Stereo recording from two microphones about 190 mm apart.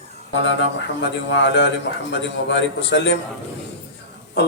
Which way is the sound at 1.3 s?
70° left (ahead or behind).